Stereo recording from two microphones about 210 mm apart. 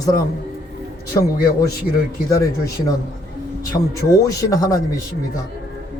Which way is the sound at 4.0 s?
15° left (ahead or behind).